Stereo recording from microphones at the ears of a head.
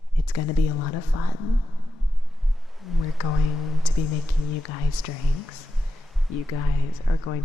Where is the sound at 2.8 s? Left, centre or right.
Left.